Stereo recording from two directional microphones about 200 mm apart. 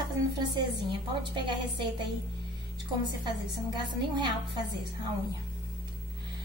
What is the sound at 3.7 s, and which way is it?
Speech, 20° right (ahead or behind).